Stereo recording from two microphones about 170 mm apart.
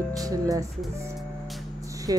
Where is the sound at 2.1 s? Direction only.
20° right (ahead or behind).